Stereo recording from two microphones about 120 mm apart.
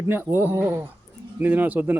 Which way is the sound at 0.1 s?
15° right (ahead or behind).